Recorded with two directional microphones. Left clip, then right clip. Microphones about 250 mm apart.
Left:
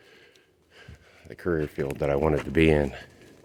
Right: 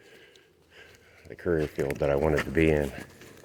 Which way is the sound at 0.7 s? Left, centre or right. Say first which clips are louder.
Even; left.